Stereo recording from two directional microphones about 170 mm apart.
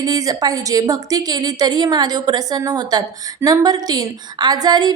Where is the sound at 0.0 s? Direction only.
20° right (ahead or behind).